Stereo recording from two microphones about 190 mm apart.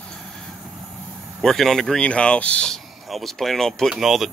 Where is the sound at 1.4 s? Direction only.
Centre (ahead or behind).